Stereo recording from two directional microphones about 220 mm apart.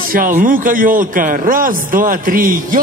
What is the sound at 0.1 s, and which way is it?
A man's voice, 40° right (ahead or behind).